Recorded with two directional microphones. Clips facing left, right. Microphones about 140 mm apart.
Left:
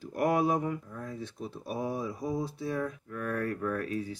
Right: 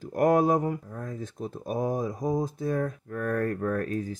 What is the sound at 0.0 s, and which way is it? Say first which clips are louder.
Speech: right 5 dB; 45° right (ahead or behind).